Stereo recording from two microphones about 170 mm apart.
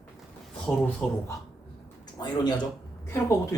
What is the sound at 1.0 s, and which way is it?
Speech, 5° left (ahead or behind).